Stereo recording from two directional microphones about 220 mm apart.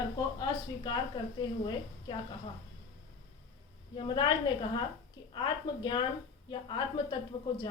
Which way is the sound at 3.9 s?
20° left (ahead or behind).